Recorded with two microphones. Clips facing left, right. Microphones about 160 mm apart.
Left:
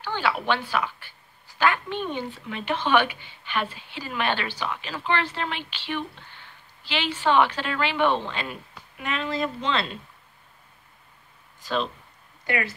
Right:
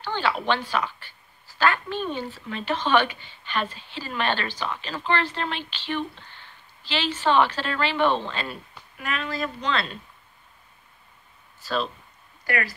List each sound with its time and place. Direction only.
0.0 s a woman's voice: 10° left (ahead or behind)
11.6 s speech: 20° left (ahead or behind)